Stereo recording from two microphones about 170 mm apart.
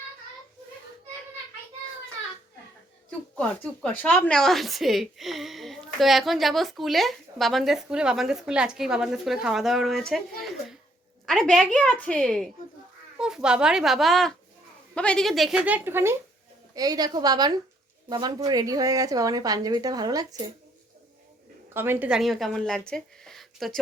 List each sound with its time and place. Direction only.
3.1 s a woman's voice: 5° left (ahead or behind); by 20.2 s 20° right (ahead or behind)
21.7 s a woman's voice: 15° right (ahead or behind)